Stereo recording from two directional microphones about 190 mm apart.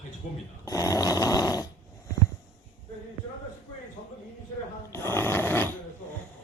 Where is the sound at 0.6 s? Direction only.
15° left (ahead or behind).